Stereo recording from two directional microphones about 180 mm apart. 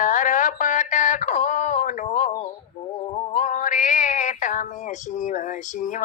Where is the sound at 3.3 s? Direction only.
45° left (ahead or behind).